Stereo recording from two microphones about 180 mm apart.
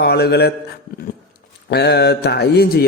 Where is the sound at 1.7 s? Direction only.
65° left (ahead or behind).